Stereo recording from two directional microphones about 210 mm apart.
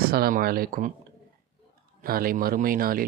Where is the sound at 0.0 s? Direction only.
45° right (ahead or behind).